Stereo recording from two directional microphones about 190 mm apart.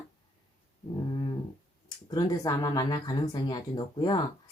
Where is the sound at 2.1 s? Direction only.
20° left (ahead or behind).